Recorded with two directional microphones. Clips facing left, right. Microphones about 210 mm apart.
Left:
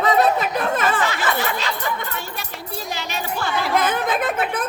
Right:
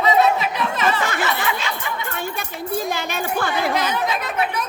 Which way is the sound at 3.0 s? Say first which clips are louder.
Right 3 dB; 55° right (ahead or behind).